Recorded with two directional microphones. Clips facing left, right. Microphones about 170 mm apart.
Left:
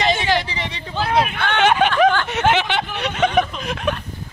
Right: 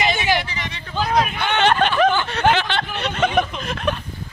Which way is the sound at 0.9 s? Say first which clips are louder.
Even; 5° left (ahead or behind).